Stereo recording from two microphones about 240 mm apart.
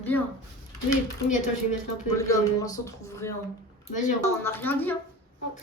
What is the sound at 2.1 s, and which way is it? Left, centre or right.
Speech, centre.